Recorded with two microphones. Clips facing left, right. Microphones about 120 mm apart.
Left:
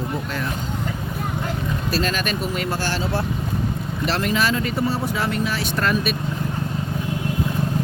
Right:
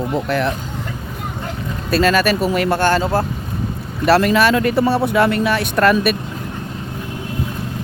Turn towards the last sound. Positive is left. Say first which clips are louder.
# right 7 dB
turn(degrees=-65)  # may be behind; listen again after turning